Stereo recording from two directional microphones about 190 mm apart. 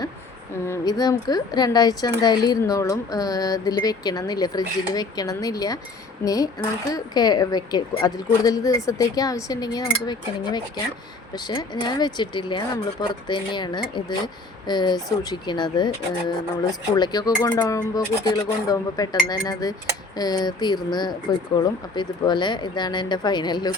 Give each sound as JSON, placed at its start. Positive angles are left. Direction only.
{"t": 0.7, "sound": "speech", "side_deg": 20}
{"t": 16.9, "sound": "speech", "side_deg": 20}